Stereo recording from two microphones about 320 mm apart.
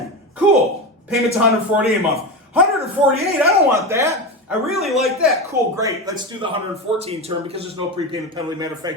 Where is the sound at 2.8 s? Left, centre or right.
Centre.